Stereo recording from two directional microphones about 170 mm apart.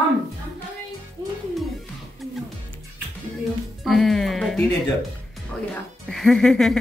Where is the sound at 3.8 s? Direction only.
Centre (ahead or behind).